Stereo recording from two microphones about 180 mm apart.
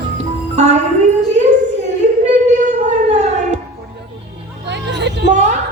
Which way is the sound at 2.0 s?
40° right (ahead or behind).